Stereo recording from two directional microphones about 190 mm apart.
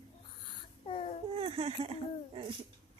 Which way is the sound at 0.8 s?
30° left (ahead or behind).